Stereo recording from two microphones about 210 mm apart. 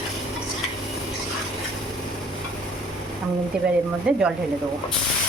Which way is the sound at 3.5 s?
5° right (ahead or behind).